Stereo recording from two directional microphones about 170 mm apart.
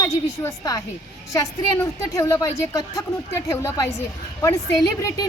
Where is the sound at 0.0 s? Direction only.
20° left (ahead or behind).